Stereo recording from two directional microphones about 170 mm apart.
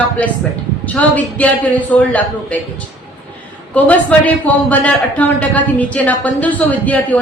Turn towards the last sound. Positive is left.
turn(degrees=10)  # may be behind; listen again after turning